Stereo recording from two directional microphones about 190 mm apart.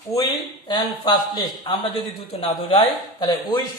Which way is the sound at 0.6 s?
20° left (ahead or behind).